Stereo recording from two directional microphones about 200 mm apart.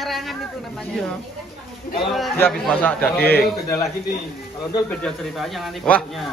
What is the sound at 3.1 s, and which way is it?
Speech, 50° left (ahead or behind).